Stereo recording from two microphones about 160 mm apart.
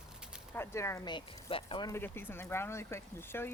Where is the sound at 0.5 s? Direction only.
15° left (ahead or behind); by 1.9 s 35° left (ahead or behind).